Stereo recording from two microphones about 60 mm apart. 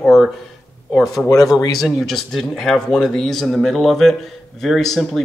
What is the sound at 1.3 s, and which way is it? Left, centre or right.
Speech, left.